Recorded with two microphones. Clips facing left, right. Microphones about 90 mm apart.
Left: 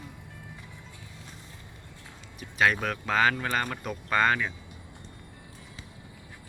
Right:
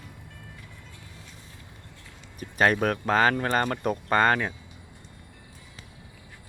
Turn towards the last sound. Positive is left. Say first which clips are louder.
# right 3 dB
turn(degrees=-45)  # may be behind; listen again after turning